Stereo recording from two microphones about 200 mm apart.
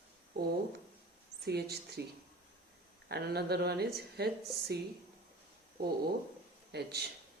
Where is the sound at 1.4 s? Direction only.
55° right (ahead or behind).